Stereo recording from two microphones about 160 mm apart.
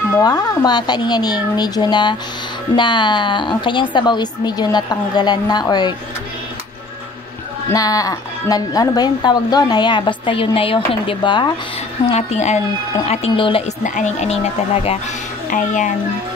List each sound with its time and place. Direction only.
0.2 s a woman's voice: 25° left (ahead or behind)
7.7 s a woman's voice: 20° left (ahead or behind)
12.1 s speech: 45° left (ahead or behind)
13.8 s speech: 50° left (ahead or behind)
15.5 s speech: 50° left (ahead or behind)